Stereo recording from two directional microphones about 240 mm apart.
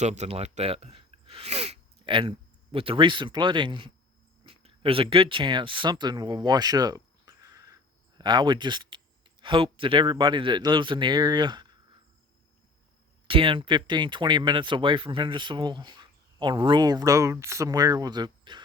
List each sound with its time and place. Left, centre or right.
0.0 s speech: right
13.2 s speech: right